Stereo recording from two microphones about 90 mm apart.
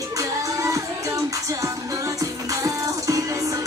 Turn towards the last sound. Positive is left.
turn(degrees=-40)  # may be behind; listen again after turning